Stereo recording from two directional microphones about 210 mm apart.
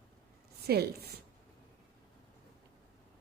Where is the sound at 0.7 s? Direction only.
50° right (ahead or behind).